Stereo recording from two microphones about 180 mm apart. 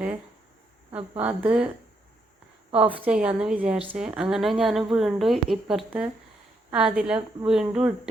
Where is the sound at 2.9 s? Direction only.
5° right (ahead or behind).